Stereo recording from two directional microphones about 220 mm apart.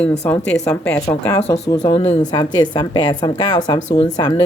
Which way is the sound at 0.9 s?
15° left (ahead or behind).